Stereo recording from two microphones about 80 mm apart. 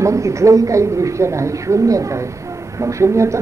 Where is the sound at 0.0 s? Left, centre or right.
Right.